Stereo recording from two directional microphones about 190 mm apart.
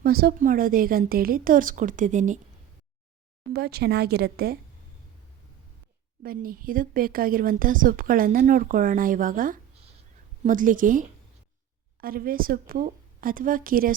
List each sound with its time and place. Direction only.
0.0 s speech: 50° right (ahead or behind)
3.5 s speech: 55° right (ahead or behind)
6.2 s speech: 50° right (ahead or behind)